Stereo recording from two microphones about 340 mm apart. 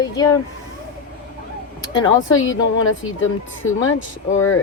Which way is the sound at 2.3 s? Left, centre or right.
Left.